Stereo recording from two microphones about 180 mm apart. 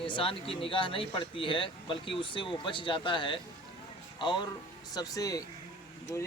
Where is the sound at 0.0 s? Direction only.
30° left (ahead or behind).